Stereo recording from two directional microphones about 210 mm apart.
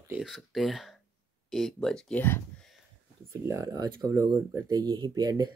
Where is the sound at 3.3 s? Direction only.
15° right (ahead or behind).